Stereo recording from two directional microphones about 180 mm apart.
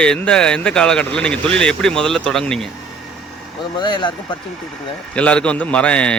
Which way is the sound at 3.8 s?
25° left (ahead or behind).